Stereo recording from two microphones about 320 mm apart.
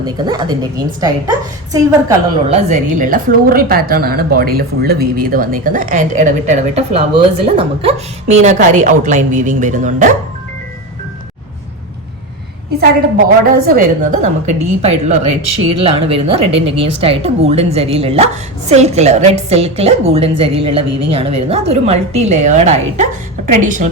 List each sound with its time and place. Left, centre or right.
0.0 s a woman's voice: centre
2.6 s a woman's voice: right
13.7 s a woman's voice: right